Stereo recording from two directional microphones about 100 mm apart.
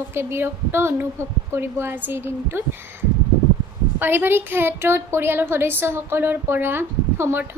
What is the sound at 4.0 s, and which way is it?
A woman's voice, 20° right (ahead or behind).